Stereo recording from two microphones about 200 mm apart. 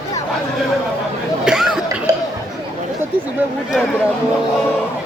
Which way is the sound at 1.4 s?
5° right (ahead or behind).